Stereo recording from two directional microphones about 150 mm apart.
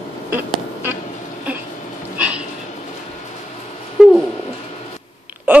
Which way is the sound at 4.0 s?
5° right (ahead or behind).